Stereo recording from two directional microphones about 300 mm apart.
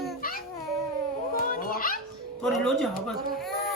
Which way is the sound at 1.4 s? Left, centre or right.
Left.